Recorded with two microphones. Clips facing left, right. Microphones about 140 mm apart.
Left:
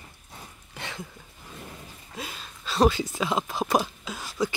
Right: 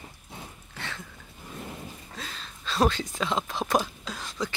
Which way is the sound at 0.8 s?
15° left (ahead or behind).